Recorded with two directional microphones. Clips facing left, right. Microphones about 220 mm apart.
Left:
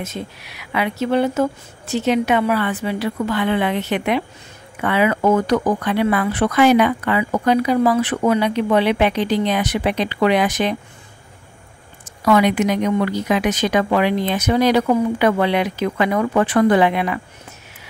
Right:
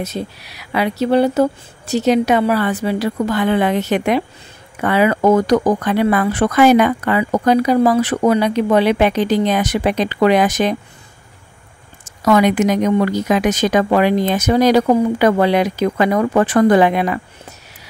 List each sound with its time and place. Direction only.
0.0 s speech: 35° right (ahead or behind)
12.0 s speech: 45° right (ahead or behind)